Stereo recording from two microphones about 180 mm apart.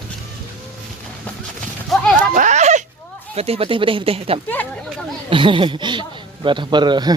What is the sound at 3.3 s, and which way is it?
Speech, 35° right (ahead or behind).